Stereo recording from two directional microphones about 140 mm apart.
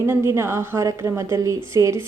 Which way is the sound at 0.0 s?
20° right (ahead or behind).